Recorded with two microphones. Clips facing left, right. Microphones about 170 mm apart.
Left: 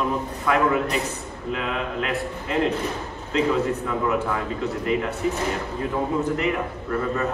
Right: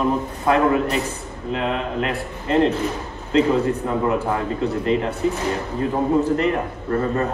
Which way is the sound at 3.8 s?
30° right (ahead or behind).